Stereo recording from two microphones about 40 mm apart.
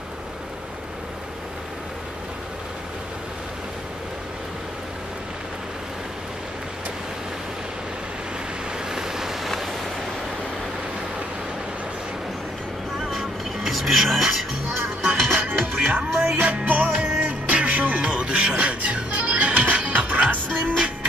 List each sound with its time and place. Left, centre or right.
8.9 s vehicle: centre
13.2 s music: centre
15.3 s music: right
16.3 s music: right